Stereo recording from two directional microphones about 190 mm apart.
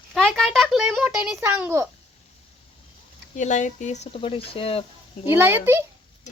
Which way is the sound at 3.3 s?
40° left (ahead or behind).